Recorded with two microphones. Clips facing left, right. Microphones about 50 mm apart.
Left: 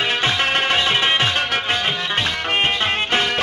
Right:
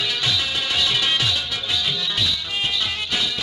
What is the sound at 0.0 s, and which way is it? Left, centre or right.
Music, left.